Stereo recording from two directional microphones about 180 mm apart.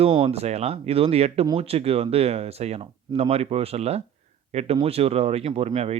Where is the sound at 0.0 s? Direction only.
35° right (ahead or behind).